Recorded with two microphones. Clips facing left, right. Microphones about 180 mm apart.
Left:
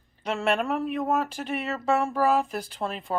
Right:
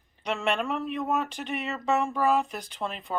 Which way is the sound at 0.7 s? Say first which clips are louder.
Left 3 dB; 5° left (ahead or behind).